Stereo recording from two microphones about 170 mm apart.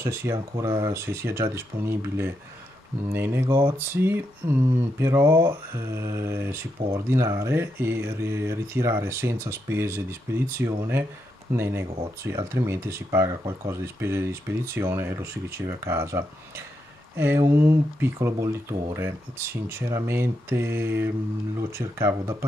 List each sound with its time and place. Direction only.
0.0 s speech: 15° right (ahead or behind)